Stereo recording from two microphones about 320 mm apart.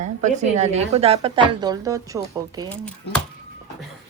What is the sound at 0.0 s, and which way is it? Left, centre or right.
A woman's voice, right.